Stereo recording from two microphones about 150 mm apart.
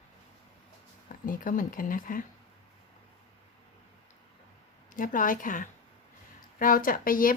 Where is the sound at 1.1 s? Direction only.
65° left (ahead or behind).